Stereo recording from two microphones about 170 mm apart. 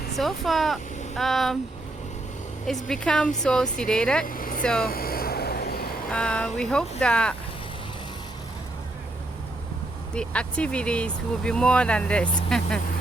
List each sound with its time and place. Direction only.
0.2 s speech: centre (ahead or behind)
2.6 s speech: centre (ahead or behind)
4.3 s vehicle: 55° left (ahead or behind)
4.6 s speech: 5° left (ahead or behind)
4.9 s a sound: 60° left (ahead or behind)
6.1 s speech: 5° left (ahead or behind)
10.2 s speech: 5° left (ahead or behind)